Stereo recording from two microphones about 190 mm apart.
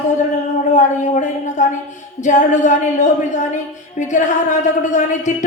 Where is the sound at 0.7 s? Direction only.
40° left (ahead or behind).